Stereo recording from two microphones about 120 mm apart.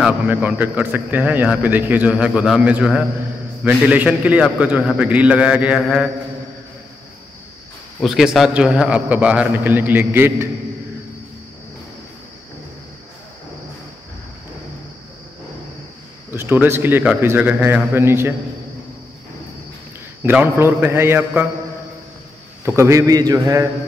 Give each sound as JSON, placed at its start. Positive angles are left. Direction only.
{"t": 0.0, "sound": "a man's voice", "side_deg": -15}
{"t": 8.0, "sound": "a man's voice", "side_deg": -5}
{"t": 16.3, "sound": "a man's voice", "side_deg": -15}
{"t": 20.2, "sound": "a man's voice", "side_deg": -15}
{"t": 22.7, "sound": "a man's voice", "side_deg": -25}